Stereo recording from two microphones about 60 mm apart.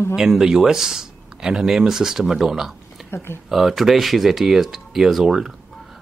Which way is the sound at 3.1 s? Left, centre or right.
Left.